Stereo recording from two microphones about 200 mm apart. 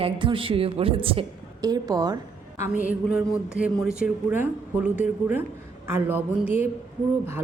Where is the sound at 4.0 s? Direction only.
5° right (ahead or behind).